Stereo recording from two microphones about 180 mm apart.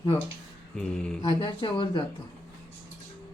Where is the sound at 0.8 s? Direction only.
5° left (ahead or behind).